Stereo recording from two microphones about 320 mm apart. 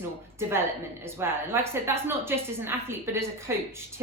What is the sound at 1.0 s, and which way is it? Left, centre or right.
A woman's voice, centre.